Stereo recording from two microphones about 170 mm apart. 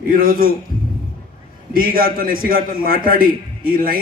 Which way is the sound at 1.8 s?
60° right (ahead or behind).